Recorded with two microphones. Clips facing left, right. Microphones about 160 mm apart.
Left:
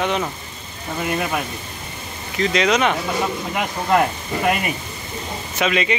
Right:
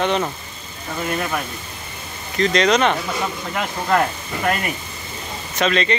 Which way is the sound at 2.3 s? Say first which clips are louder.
Right 2 dB; 5° left (ahead or behind).